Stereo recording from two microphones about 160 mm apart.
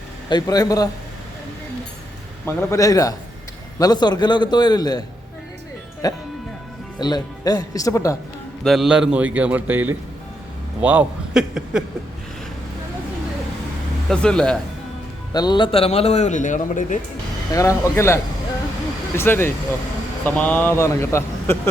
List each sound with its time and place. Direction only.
0.3 s a man's voice: 25° left (ahead or behind)
2.6 s a man's voice: 20° left (ahead or behind)
6.0 s a man's voice: 20° left (ahead or behind)
8.6 s a man's voice: centre (ahead or behind)
14.1 s speech: 5° left (ahead or behind)
15.3 s a man's voice: 25° left (ahead or behind); by 17.0 s 55° left (ahead or behind)
17.5 s speech: 20° left (ahead or behind)